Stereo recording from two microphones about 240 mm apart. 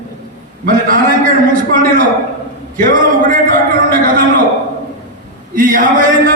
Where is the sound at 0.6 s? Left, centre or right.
Right.